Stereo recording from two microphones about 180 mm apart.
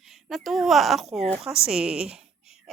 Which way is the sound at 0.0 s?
Centre (ahead or behind).